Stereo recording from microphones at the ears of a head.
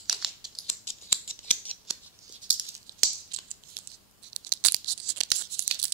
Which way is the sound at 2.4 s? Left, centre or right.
Right.